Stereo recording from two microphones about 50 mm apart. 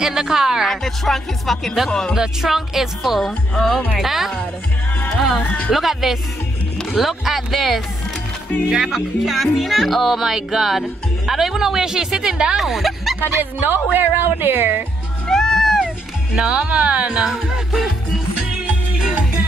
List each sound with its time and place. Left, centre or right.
0.0 s a woman's voice: centre
0.7 s speech: centre
2.1 s speech: centre
4.0 s speech: centre
5.7 s speech: centre
8.6 s a woman's voice: centre
12.5 s speech: centre
13.4 s a woman's voice: right
15.2 s music: centre
16.3 s speech: centre
17.2 s speech: centre